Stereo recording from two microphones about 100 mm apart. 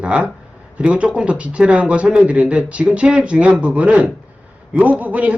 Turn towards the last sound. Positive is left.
turn(degrees=-15)  # may be behind; listen again after turning